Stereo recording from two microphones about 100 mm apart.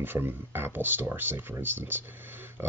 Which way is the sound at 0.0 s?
20° right (ahead or behind).